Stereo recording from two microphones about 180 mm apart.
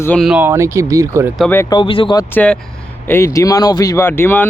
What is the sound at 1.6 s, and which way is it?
Speech, 25° left (ahead or behind).